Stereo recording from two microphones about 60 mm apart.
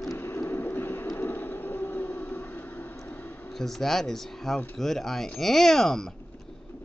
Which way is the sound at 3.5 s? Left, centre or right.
Centre.